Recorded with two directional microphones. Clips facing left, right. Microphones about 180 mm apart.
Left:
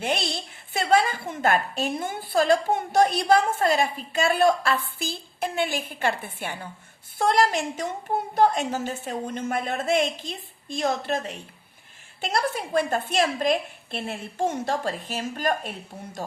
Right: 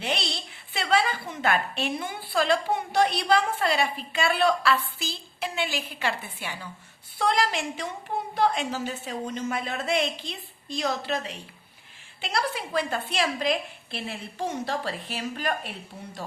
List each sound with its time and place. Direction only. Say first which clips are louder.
0.0 s a woman's voice: left 3 dB; 50° left (ahead or behind)